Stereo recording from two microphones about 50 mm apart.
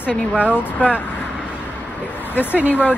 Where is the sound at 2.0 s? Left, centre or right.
Left.